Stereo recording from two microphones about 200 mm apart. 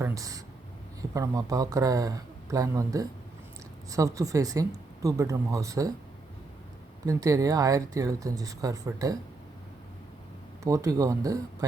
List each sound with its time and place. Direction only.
0.0 s a sound: 15° right (ahead or behind)
1.1 s speech: 15° right (ahead or behind)
7.0 s speech: 15° right (ahead or behind)
10.6 s speech: 15° right (ahead or behind)